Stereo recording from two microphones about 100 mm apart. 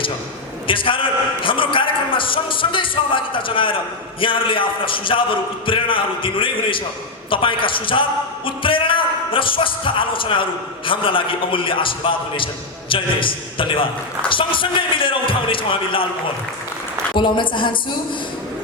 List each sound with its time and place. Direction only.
0.7 s a man's voice: 60° left (ahead or behind)
17.2 s a man's voice: 50° left (ahead or behind)